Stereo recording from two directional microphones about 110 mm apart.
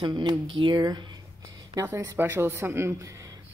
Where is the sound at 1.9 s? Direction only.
20° right (ahead or behind).